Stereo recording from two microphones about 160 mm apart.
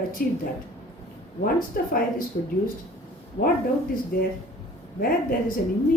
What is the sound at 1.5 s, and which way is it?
Speech, 60° left (ahead or behind).